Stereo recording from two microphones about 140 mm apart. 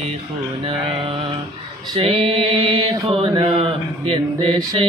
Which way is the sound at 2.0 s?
45° right (ahead or behind).